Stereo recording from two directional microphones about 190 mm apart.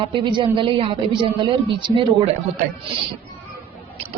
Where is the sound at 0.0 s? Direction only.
25° right (ahead or behind).